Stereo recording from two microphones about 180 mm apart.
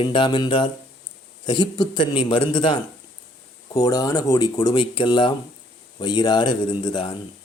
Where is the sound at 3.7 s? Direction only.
20° left (ahead or behind).